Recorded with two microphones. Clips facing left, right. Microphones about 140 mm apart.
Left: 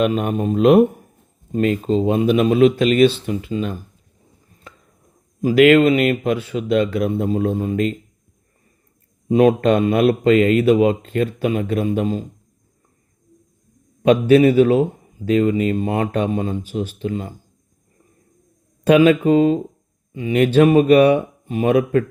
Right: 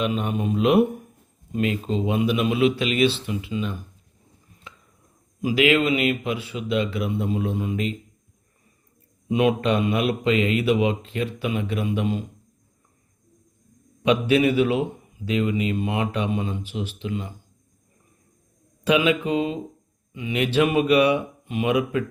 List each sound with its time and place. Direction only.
0.0 s a man's voice: 45° left (ahead or behind)
4.7 s a sound: 45° left (ahead or behind)
5.4 s a man's voice: 50° left (ahead or behind)
9.3 s a man's voice: 45° left (ahead or behind)
14.0 s a man's voice: 45° left (ahead or behind)
18.9 s a man's voice: 45° left (ahead or behind)